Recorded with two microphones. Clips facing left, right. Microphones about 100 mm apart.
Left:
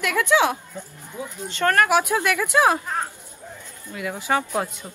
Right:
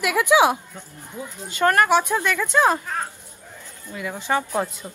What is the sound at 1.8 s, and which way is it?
Speech, 5° left (ahead or behind).